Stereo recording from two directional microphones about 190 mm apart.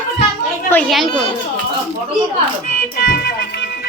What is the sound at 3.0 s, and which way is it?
Music, 60° left (ahead or behind).